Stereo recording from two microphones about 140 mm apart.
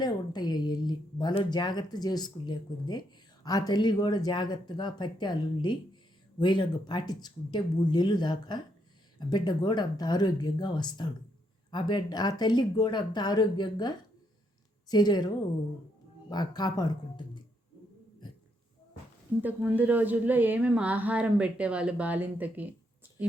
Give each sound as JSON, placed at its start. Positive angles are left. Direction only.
{"t": 0.0, "sound": "speech", "side_deg": 30}
{"t": 16.3, "sound": "speech", "side_deg": 30}
{"t": 19.4, "sound": "speech", "side_deg": -15}